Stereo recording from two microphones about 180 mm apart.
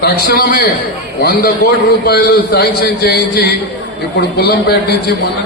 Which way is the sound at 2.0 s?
60° left (ahead or behind).